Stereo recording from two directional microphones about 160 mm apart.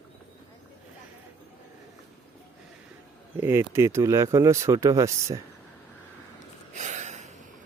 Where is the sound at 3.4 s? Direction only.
15° right (ahead or behind).